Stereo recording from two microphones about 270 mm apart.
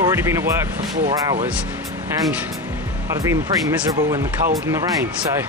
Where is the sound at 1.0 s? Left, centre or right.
Right.